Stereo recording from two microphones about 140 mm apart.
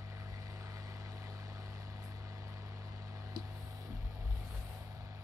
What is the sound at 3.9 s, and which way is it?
Vehicle, 15° right (ahead or behind).